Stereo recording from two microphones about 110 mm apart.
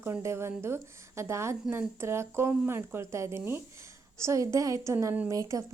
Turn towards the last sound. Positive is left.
turn(degrees=-30)  # may be behind; listen again after turning